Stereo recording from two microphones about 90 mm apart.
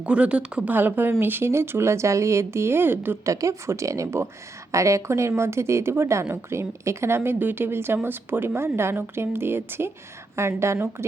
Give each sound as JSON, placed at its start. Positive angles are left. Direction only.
{"t": 0.0, "sound": "speech", "side_deg": -10}
{"t": 3.2, "sound": "speech", "side_deg": -35}